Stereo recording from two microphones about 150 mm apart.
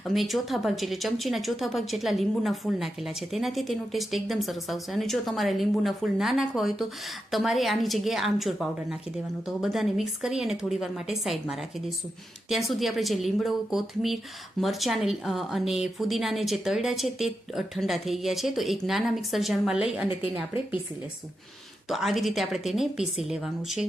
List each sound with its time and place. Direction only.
0.0 s speech: centre (ahead or behind)
21.8 s speech: centre (ahead or behind)